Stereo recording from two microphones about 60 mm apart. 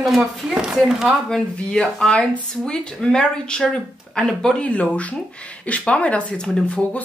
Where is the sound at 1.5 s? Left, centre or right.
Left.